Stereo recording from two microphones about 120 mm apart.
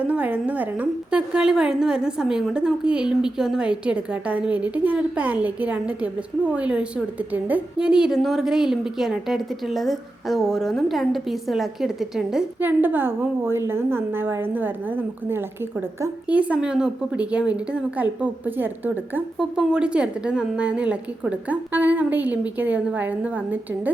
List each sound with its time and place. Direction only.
0.0 s a woman's voice: 10° right (ahead or behind)
12.5 s a woman's voice: 15° right (ahead or behind)